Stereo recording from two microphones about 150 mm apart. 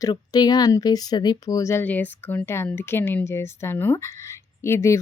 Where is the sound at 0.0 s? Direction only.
25° left (ahead or behind).